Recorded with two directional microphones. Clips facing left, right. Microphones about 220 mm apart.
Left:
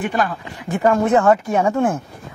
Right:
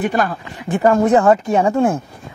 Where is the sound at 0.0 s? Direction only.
40° right (ahead or behind).